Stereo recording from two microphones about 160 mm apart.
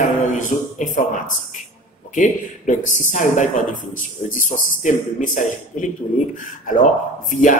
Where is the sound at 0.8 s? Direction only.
55° left (ahead or behind).